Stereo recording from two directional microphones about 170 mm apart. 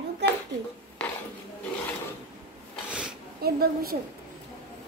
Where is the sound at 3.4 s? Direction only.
65° right (ahead or behind).